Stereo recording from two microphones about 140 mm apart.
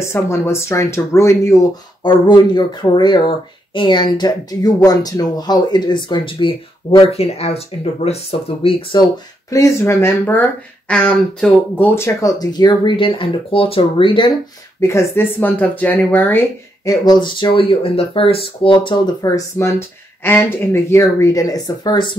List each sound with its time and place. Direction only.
0.0 s speech: 20° left (ahead or behind)
2.0 s speech: 35° left (ahead or behind)
9.5 s speech: 20° left (ahead or behind); by 14.3 s 35° left (ahead or behind)
14.8 s speech: 20° left (ahead or behind)
16.8 s speech: 25° left (ahead or behind)
19.2 s speech: 25° left (ahead or behind)